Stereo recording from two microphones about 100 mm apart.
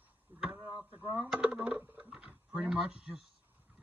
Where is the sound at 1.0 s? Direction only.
15° right (ahead or behind).